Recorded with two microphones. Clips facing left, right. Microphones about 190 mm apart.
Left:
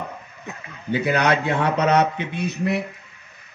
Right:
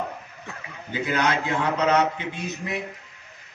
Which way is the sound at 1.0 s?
65° left (ahead or behind).